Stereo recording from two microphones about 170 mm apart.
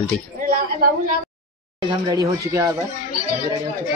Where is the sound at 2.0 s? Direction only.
20° right (ahead or behind).